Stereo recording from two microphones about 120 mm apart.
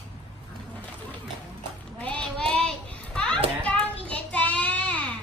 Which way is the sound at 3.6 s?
10° left (ahead or behind).